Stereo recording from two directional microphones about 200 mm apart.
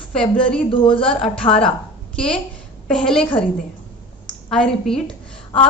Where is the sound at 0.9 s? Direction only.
5° left (ahead or behind).